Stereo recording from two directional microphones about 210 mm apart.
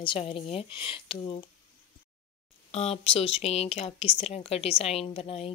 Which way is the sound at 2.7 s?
30° left (ahead or behind).